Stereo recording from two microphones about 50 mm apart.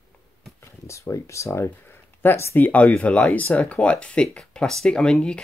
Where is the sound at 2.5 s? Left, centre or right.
Left.